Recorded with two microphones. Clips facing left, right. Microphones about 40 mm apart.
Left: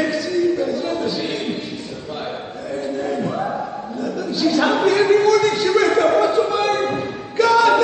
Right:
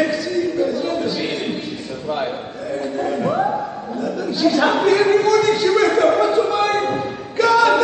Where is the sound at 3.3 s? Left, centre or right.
Right.